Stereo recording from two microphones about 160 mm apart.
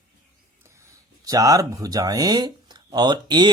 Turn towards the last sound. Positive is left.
turn(degrees=-30)  # may be behind; listen again after turning